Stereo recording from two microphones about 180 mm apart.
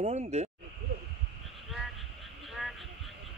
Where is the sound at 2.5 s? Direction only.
Centre (ahead or behind).